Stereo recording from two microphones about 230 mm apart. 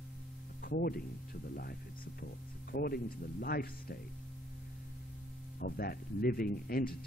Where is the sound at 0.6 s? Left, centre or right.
Left.